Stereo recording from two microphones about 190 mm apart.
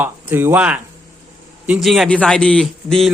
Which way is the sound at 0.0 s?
10° right (ahead or behind).